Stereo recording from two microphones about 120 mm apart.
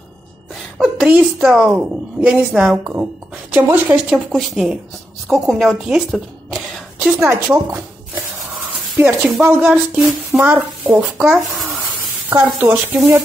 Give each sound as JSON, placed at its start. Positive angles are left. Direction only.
{"t": 0.7, "sound": "a woman's voice", "side_deg": -5}
{"t": 7.2, "sound": "speech", "side_deg": -20}
{"t": 12.3, "sound": "speech", "side_deg": -15}